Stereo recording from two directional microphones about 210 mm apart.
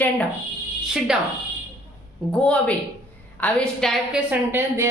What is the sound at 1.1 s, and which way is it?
Speech, 5° right (ahead or behind).